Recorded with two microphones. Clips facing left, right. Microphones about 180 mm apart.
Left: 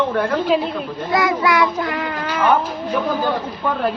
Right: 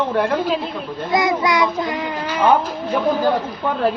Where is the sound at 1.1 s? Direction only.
20° right (ahead or behind).